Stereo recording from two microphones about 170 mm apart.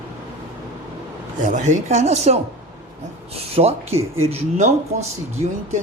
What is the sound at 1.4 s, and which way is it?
Speech, 45° right (ahead or behind).